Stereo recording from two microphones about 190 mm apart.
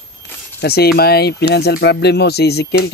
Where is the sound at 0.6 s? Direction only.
55° left (ahead or behind).